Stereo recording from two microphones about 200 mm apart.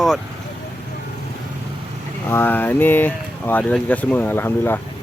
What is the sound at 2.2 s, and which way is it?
Speech, 10° left (ahead or behind).